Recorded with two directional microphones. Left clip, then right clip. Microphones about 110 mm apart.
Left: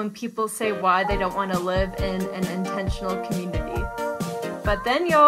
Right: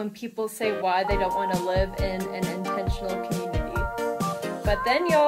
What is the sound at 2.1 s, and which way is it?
Music, centre (ahead or behind).